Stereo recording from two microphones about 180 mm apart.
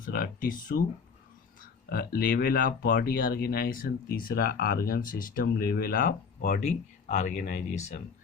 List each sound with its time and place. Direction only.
0.0 s speech: 55° left (ahead or behind)
1.9 s speech: 55° left (ahead or behind)